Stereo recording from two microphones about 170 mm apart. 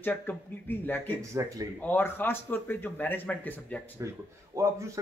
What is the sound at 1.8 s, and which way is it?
Speech, 10° left (ahead or behind).